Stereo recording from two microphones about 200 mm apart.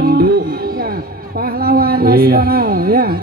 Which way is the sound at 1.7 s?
50° right (ahead or behind).